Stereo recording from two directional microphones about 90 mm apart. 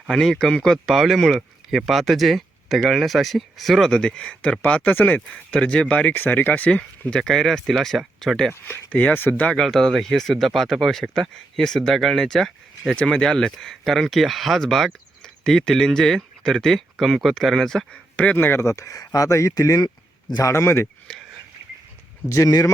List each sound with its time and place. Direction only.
0.1 s speech: 5° left (ahead or behind)
8.9 s speech: 15° left (ahead or behind)
9.5 s speech: 5° left (ahead or behind); by 20.8 s 30° left (ahead or behind)
22.3 s speech: 40° left (ahead or behind)